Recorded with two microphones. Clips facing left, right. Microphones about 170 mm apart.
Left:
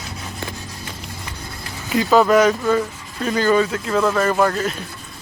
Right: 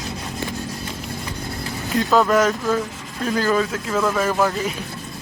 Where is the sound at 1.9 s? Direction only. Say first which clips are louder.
Left 3 dB; centre (ahead or behind).